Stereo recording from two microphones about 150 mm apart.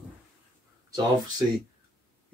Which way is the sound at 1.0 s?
25° right (ahead or behind).